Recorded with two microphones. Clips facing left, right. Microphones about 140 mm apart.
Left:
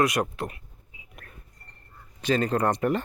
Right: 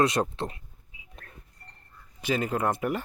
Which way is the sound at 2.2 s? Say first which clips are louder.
Left 3 dB; 10° right (ahead or behind).